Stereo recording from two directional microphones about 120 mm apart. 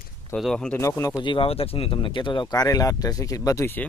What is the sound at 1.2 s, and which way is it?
Speech, 45° left (ahead or behind).